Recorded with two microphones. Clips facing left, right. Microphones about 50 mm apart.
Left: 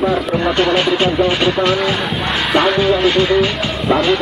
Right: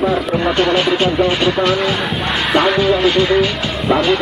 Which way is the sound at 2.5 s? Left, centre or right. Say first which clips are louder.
Even; centre.